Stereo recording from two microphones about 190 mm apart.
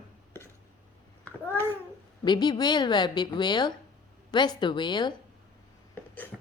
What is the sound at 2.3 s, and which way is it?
A woman's voice, 20° left (ahead or behind).